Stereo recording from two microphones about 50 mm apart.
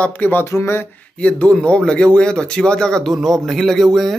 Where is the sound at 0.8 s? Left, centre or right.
Left.